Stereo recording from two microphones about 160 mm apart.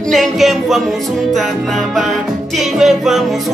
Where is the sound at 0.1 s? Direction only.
Centre (ahead or behind).